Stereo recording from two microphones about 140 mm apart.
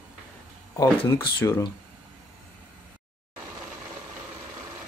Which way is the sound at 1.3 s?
20° left (ahead or behind).